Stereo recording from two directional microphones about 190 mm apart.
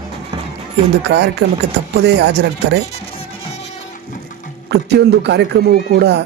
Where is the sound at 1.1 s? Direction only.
75° right (ahead or behind).